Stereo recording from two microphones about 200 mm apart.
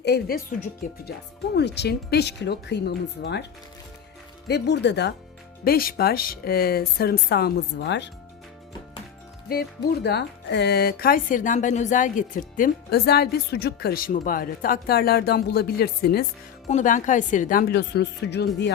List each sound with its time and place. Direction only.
0.0 s speech: 50° left (ahead or behind)
4.4 s speech: 55° left (ahead or behind)
5.6 s speech: 50° left (ahead or behind)
9.5 s speech: 50° left (ahead or behind)
16.6 s speech: 40° left (ahead or behind); by 18.7 s 55° left (ahead or behind)